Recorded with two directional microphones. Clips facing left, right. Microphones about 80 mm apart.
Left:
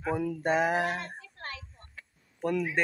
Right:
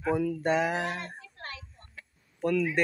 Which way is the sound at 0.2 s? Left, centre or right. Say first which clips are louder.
Even; left.